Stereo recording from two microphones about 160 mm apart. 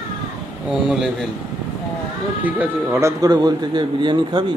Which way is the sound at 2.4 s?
10° right (ahead or behind).